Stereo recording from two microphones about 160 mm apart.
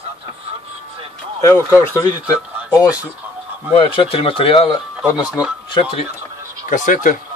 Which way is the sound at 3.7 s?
35° left (ahead or behind).